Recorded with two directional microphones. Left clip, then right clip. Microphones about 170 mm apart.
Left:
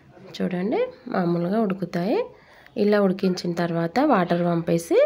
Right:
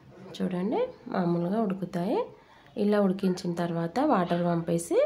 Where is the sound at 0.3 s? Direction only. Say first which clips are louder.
Left 5 dB; 20° left (ahead or behind).